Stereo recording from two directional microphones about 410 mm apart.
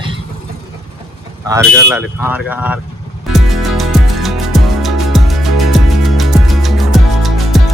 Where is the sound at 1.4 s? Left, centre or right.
Centre.